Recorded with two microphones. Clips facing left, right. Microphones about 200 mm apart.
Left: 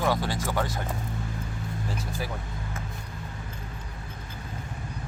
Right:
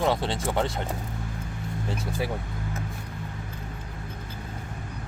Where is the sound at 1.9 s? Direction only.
20° right (ahead or behind).